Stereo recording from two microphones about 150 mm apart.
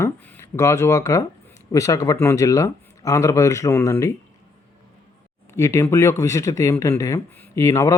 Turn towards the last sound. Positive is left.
turn(degrees=20)  # may be behind; listen again after turning